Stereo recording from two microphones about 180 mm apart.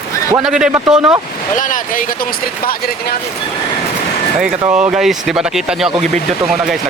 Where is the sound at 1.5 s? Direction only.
45° left (ahead or behind).